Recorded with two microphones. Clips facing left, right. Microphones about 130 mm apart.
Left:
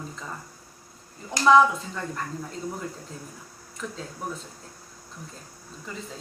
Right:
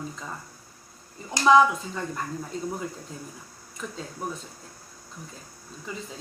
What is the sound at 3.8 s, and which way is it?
Speech, 5° right (ahead or behind).